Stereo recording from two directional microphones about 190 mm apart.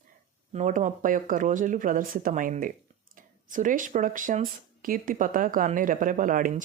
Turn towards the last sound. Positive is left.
turn(degrees=-45)  # may be behind; listen again after turning